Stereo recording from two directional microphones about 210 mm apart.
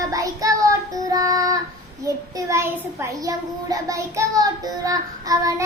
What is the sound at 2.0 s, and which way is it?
A child's voice, 15° right (ahead or behind).